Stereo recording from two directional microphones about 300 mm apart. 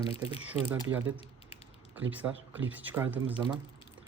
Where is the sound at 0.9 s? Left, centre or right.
Centre.